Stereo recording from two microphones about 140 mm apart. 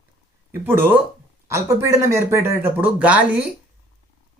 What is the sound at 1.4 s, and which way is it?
Speech, 20° right (ahead or behind).